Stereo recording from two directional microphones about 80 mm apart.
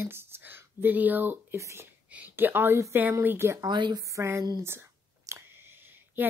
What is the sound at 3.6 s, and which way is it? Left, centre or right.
Speech, right.